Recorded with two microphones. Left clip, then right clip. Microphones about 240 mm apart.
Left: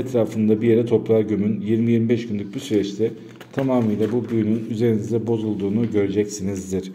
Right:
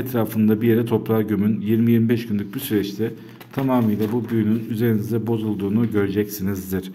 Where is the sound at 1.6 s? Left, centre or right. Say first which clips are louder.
Right 1 dB; right.